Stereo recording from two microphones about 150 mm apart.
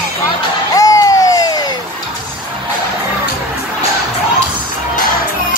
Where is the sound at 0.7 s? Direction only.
25° left (ahead or behind).